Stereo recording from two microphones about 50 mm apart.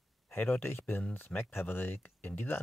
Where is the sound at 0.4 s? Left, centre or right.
Left.